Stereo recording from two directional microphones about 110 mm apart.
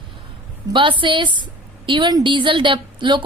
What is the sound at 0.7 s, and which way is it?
A woman's voice, 50° right (ahead or behind).